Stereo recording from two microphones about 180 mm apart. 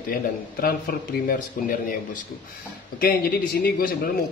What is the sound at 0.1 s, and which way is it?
Speech, 55° left (ahead or behind).